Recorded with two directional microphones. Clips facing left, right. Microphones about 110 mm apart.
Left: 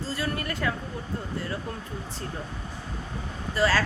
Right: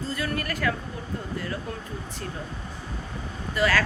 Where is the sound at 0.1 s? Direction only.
25° left (ahead or behind).